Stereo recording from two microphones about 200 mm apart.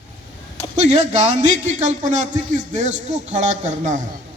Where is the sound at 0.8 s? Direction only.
35° right (ahead or behind).